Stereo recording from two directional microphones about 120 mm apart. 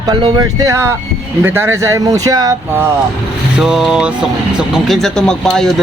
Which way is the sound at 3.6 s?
5° right (ahead or behind).